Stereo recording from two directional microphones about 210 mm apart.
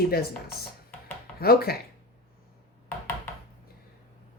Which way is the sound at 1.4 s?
45° left (ahead or behind).